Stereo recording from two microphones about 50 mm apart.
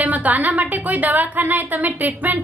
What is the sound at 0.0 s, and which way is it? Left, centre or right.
A woman's voice, right.